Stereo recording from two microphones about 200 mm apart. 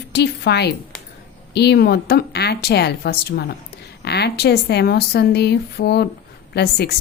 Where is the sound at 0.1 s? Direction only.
55° left (ahead or behind).